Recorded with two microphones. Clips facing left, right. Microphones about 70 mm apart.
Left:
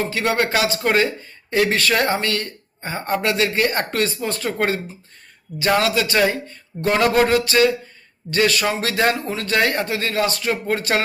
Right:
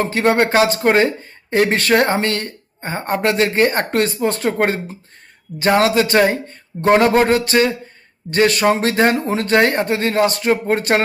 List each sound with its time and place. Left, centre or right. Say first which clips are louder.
0.0 s speech: right 5 dB; right
9.1 s speech: right 6 dB; right